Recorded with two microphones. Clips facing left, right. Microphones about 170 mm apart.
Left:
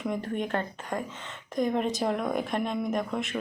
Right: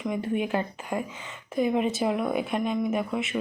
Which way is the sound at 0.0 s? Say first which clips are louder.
Right 3 dB; 5° right (ahead or behind).